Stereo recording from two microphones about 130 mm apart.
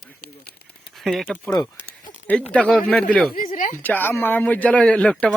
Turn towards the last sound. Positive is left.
turn(degrees=10)  # may be behind; listen again after turning